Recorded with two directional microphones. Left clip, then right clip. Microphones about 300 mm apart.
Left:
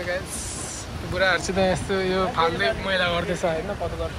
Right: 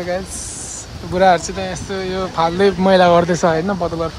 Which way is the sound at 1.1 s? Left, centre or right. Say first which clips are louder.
Right 8 dB; centre.